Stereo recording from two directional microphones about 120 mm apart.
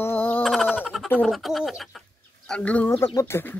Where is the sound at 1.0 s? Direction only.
15° left (ahead or behind).